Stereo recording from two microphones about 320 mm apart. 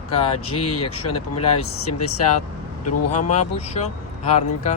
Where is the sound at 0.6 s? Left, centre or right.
Left.